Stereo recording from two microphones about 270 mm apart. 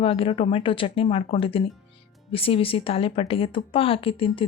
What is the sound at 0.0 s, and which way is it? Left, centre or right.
Speech, centre.